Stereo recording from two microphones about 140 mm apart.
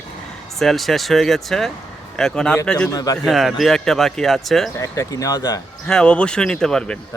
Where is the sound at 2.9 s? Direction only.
25° left (ahead or behind).